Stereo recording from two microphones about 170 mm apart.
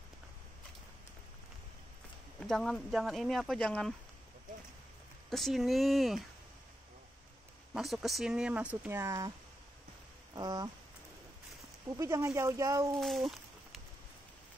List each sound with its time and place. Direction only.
2.4 s speech: centre (ahead or behind)
5.3 s speech: centre (ahead or behind)
7.7 s speech: centre (ahead or behind); by 9.3 s 15° right (ahead or behind)
10.3 s speech: 25° right (ahead or behind)
12.0 s speech: 15° right (ahead or behind)
13.0 s a sound: centre (ahead or behind)